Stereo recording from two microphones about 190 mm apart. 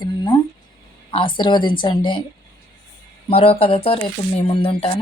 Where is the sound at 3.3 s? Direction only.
30° left (ahead or behind).